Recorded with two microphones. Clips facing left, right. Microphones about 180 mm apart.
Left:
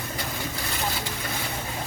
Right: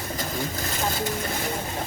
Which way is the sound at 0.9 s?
45° right (ahead or behind).